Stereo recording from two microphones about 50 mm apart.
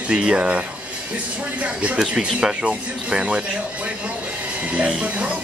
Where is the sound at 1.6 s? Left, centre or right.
Right.